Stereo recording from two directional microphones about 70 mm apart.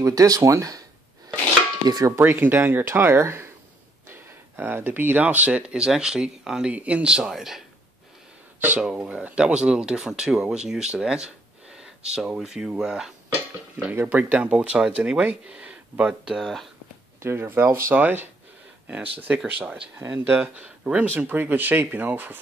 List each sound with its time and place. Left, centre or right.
0.0 s speech: right
1.9 s a sound: right
2.2 s speech: right; by 6.7 s centre
6.7 s speech: centre
8.5 s speech: right
8.8 s speech: centre
13.9 s speech: right; by 16.4 s centre
17.2 s speech: right
17.9 s speech: right
20.5 s speech: centre
21.3 s speech: right